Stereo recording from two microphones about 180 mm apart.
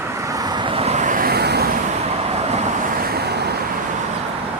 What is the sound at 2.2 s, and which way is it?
Vehicle, 35° right (ahead or behind).